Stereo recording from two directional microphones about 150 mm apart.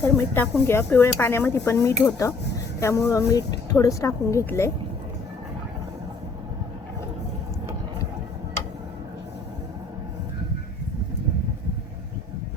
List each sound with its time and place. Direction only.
0.0 s dishes: 15° left (ahead or behind)
2.0 s speech: 20° left (ahead or behind)
4.4 s dishes: 15° left (ahead or behind)